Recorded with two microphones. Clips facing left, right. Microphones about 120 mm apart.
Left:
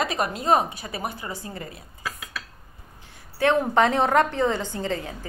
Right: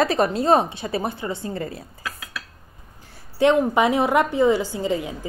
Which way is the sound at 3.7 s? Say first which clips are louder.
Right 1 dB; 10° right (ahead or behind).